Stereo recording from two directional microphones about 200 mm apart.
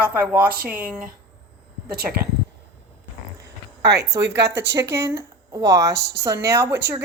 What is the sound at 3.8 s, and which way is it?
Speech, 55° right (ahead or behind).